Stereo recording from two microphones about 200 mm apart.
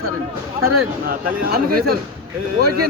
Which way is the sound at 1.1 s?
50° right (ahead or behind).